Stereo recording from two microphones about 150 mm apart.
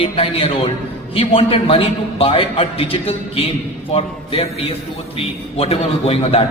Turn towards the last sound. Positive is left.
turn(degrees=40)  # may be behind; listen again after turning